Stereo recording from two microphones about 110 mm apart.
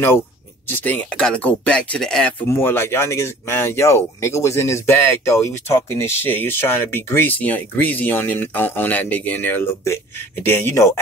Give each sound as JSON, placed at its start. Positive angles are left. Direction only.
{"t": 0.7, "sound": "speech", "side_deg": 15}
{"t": 2.4, "sound": "speech", "side_deg": 20}